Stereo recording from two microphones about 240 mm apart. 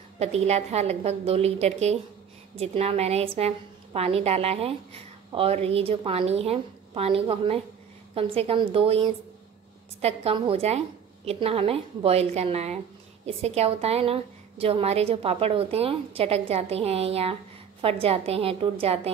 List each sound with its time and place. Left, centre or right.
0.2 s a woman's voice: right